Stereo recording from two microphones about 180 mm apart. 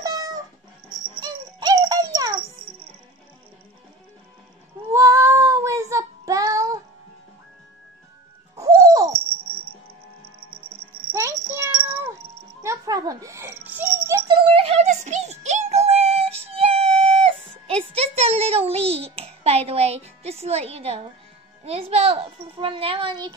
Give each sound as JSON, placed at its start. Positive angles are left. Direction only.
{"t": 0.0, "sound": "cat", "side_deg": -20}
{"t": 1.2, "sound": "music", "side_deg": -20}
{"t": 4.9, "sound": "child singing", "side_deg": -15}
{"t": 8.5, "sound": "music", "side_deg": -20}
{"t": 11.1, "sound": "a sound", "side_deg": -15}
{"t": 14.2, "sound": "synthetic singing", "side_deg": -25}
{"t": 21.6, "sound": "a child's voice", "side_deg": -35}